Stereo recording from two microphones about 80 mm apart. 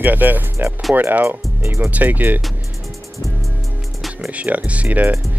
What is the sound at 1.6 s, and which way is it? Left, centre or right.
Speech, right.